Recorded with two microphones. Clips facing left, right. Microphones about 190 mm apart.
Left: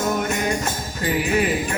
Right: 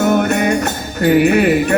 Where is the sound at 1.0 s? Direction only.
65° right (ahead or behind).